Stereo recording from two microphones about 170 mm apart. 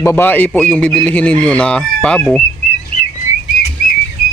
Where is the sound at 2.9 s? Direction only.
35° right (ahead or behind).